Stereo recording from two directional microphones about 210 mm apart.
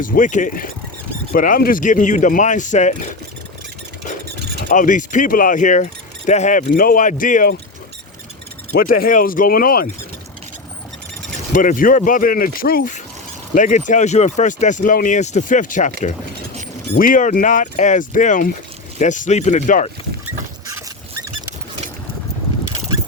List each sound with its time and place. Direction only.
0.0 s speech: 40° left (ahead or behind)
4.7 s speech: 40° left (ahead or behind)
8.7 s speech: 45° left (ahead or behind)
11.5 s speech: 40° left (ahead or behind)